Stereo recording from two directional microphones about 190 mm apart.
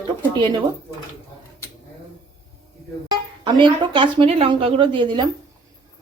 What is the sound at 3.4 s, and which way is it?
A woman's voice, 25° right (ahead or behind).